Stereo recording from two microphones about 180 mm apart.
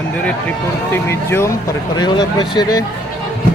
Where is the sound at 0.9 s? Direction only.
15° left (ahead or behind).